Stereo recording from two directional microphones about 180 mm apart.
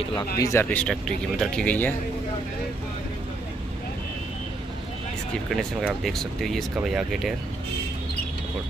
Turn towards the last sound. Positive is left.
turn(degrees=0)  # may be behind; listen again after turning